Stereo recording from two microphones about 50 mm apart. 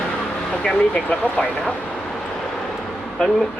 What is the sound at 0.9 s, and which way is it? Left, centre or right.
Speech, left.